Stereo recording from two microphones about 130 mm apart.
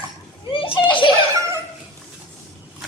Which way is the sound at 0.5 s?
40° left (ahead or behind).